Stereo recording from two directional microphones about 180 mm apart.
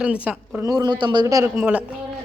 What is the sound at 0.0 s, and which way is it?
Speech, 5° right (ahead or behind).